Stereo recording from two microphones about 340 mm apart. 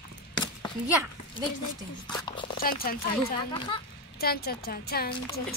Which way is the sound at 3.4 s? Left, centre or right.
Centre.